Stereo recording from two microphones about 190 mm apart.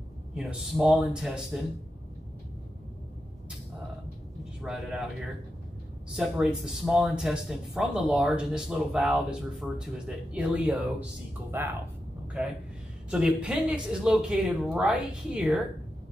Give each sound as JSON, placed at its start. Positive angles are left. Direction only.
{"t": 0.3, "sound": "speech", "side_deg": -5}
{"t": 4.6, "sound": "speech", "side_deg": 0}
{"t": 6.1, "sound": "speech", "side_deg": -5}
{"t": 13.1, "sound": "speech", "side_deg": -5}